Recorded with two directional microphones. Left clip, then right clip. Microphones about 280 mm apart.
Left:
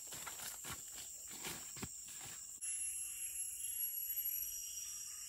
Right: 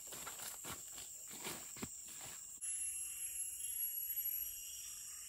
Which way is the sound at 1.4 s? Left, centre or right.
Right.